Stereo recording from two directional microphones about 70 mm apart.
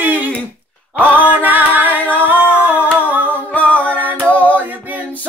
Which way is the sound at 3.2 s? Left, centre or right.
Left.